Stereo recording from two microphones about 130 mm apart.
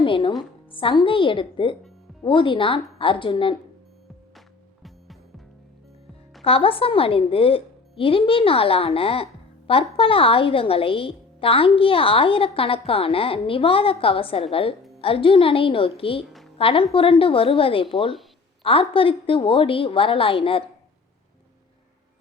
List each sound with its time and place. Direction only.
0.0 s a woman's voice: 40° left (ahead or behind)
4.4 s music: centre (ahead or behind)
6.4 s a woman's voice: 45° left (ahead or behind)